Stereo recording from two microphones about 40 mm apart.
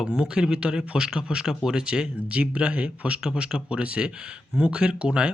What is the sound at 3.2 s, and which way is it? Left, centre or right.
Speech, centre.